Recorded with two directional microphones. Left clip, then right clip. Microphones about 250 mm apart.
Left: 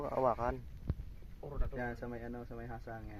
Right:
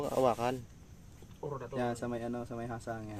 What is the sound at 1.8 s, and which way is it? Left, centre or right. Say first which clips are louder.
Speech: right 6 dB; centre.